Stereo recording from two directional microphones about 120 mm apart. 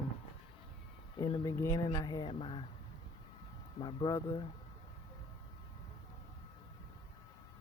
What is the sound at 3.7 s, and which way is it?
Speech, 40° left (ahead or behind).